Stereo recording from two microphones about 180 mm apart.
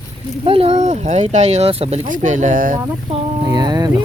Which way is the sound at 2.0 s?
45° right (ahead or behind).